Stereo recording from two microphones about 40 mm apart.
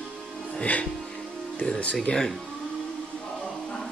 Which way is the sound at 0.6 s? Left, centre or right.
Left.